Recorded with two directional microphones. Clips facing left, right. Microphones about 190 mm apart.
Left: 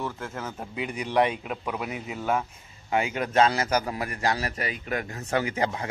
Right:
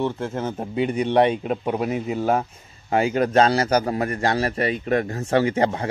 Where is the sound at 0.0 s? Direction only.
30° right (ahead or behind).